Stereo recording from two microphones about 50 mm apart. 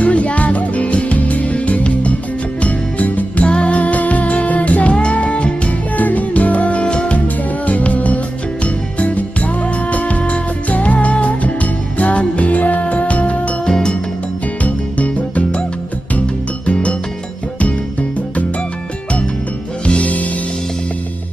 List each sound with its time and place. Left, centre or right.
0.0 s music: left
13.7 s music: centre
14.6 s music: left
16.6 s music: left
19.9 s music: left